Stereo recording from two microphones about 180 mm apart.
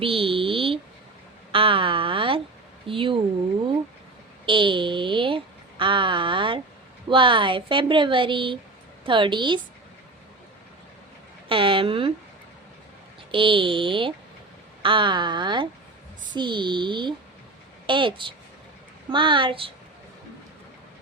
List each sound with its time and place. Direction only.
0.0 s a woman's voice: 30° right (ahead or behind)
4.4 s a sound: 30° right (ahead or behind)
7.1 s a woman's voice: 25° right (ahead or behind)
11.4 s a woman's voice: 30° right (ahead or behind)
13.3 s a woman's voice: 30° right (ahead or behind)